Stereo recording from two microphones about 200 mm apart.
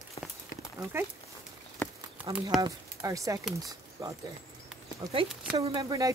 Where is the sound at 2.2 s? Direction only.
5° right (ahead or behind).